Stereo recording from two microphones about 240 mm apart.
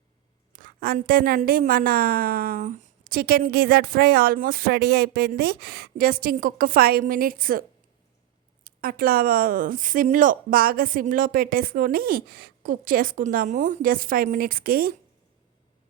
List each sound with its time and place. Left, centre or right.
0.5 s a woman's voice: right
8.6 s a woman's voice: right